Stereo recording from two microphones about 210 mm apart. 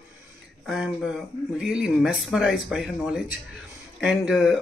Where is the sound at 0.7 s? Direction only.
Centre (ahead or behind).